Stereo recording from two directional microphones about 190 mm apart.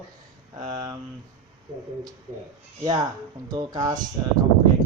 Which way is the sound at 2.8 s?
20° right (ahead or behind).